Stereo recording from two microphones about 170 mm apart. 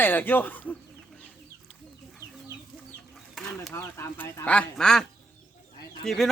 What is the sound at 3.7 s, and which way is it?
Speech, 15° left (ahead or behind).